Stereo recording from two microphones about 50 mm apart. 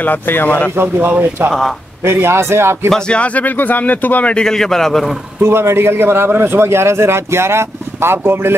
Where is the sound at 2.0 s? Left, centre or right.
Right.